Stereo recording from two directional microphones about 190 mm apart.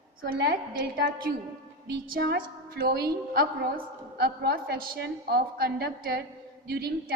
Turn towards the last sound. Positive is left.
turn(degrees=-55)  # may be behind; listen again after turning